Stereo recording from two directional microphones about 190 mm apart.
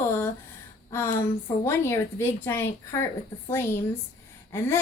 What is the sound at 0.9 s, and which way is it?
A woman's voice, 15° left (ahead or behind).